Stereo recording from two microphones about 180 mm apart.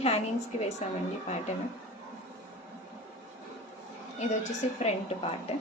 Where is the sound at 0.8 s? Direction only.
40° left (ahead or behind).